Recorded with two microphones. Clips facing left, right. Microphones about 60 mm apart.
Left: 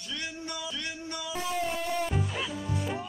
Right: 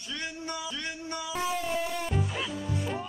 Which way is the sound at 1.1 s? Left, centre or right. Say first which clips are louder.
Right 2 dB; centre.